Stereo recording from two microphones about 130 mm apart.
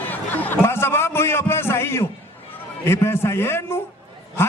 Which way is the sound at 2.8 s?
20° left (ahead or behind).